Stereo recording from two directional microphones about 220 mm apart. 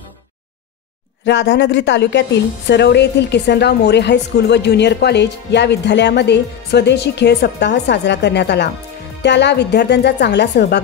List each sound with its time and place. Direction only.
1.2 s a woman's voice: 50° left (ahead or behind)